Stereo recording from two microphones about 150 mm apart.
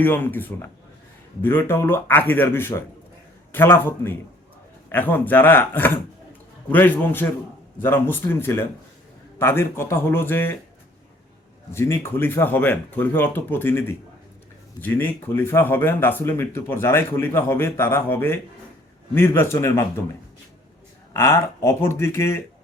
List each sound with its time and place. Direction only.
0.0 s speech: 10° left (ahead or behind)
11.7 s speech: 15° left (ahead or behind)
21.1 s speech: 15° left (ahead or behind)